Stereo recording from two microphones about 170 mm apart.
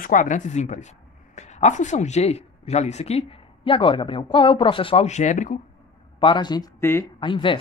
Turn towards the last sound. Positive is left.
turn(degrees=30)  # may be behind; listen again after turning